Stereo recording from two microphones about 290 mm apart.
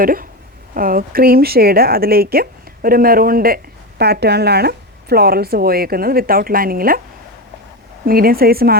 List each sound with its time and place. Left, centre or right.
0.0 s a woman's voice: right
8.0 s a woman's voice: right